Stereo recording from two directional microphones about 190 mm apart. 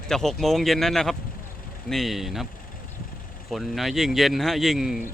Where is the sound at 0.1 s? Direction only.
Centre (ahead or behind).